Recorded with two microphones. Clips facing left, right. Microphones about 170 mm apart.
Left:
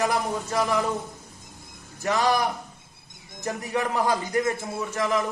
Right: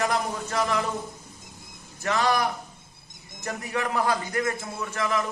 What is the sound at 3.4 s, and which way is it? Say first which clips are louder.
A man's voice: left 2 dB; 20° left (ahead or behind).